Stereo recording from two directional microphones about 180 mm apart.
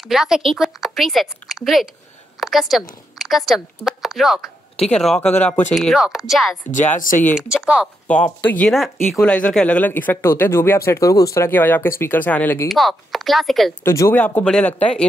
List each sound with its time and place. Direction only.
0.0 s speech: centre (ahead or behind)
6.7 s speech: 45° left (ahead or behind)
7.3 s speech: 5° right (ahead or behind)
8.1 s speech: 5° left (ahead or behind)
13.8 s speech: 15° left (ahead or behind)